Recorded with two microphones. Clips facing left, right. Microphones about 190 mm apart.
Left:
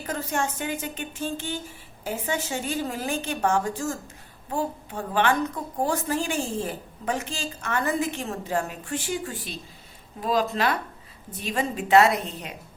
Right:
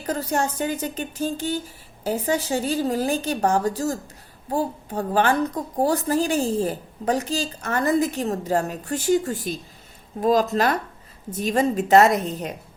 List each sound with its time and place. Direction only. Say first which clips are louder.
0.0 s a woman's voice: right 4 dB; 35° right (ahead or behind)